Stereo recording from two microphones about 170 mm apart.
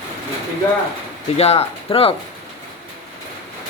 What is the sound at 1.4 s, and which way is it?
Speech, 35° left (ahead or behind).